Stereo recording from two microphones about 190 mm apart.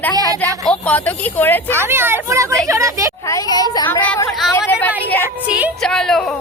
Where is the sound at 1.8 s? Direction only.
10° right (ahead or behind).